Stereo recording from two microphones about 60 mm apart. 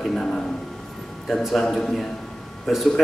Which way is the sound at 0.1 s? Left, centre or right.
Centre.